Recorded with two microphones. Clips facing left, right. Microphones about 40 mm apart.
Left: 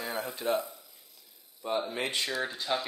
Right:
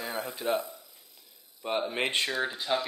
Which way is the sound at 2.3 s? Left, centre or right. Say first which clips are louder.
Right 2 dB; centre.